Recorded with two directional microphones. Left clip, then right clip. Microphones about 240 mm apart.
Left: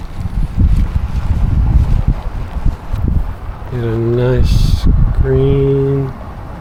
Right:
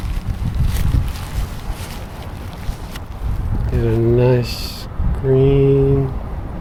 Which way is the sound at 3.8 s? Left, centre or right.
Centre.